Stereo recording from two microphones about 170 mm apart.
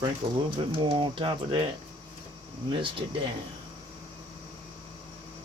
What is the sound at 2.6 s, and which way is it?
Speech, 30° right (ahead or behind).